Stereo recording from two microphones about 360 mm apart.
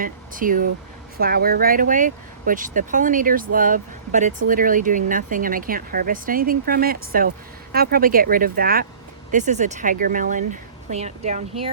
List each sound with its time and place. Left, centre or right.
0.0 s speech: right